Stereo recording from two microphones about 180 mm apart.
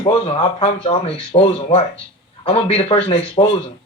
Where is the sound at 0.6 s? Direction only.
30° left (ahead or behind).